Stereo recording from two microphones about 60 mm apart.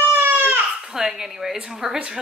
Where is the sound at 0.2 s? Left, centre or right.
Right.